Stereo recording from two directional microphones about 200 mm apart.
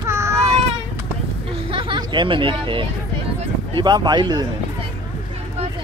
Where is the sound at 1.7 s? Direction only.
25° right (ahead or behind).